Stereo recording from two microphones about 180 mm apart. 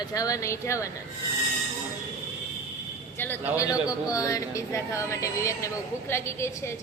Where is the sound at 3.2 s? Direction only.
10° left (ahead or behind).